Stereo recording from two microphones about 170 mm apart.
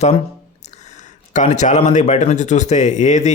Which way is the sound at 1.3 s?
45° left (ahead or behind).